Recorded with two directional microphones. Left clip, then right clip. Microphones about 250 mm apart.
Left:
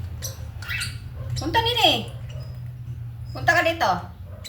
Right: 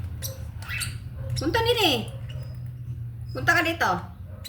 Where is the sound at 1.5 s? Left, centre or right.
Centre.